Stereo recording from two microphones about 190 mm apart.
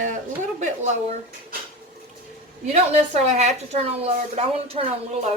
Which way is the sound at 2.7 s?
35° right (ahead or behind).